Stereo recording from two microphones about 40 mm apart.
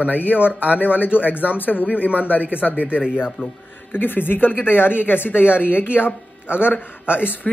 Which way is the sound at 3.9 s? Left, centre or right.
Left.